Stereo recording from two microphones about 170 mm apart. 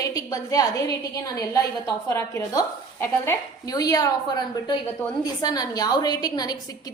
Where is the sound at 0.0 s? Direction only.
20° left (ahead or behind).